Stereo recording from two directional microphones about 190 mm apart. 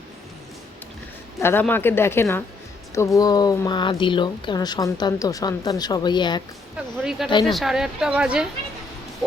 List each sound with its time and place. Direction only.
1.4 s speech: 10° left (ahead or behind)
7.0 s speech: centre (ahead or behind)
7.3 s speech: 25° left (ahead or behind)
7.5 s speech: centre (ahead or behind)